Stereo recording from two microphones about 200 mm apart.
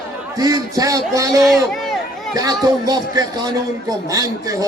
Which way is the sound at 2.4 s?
20° right (ahead or behind).